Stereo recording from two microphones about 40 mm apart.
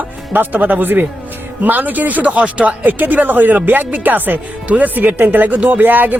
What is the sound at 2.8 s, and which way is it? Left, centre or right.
Speech, right.